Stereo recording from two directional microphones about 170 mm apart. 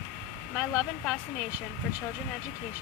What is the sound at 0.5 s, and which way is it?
Speech, 5° right (ahead or behind).